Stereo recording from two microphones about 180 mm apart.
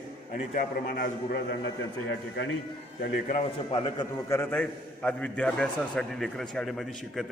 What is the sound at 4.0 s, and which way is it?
A man's voice, 15° left (ahead or behind).